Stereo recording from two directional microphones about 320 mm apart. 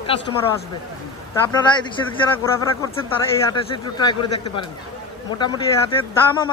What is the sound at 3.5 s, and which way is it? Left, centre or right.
Speech, centre.